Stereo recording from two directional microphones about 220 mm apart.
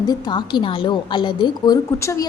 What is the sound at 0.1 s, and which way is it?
A woman's voice, 20° left (ahead or behind).